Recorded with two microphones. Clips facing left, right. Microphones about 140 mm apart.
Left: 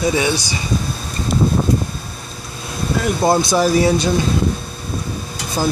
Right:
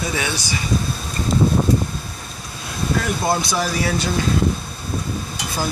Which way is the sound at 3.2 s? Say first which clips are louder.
Left 9 dB; 30° left (ahead or behind).